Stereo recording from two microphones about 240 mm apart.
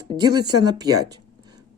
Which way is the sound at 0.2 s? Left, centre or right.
Centre.